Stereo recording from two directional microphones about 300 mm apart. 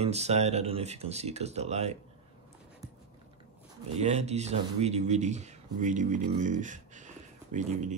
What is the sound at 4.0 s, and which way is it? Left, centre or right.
Speech, right.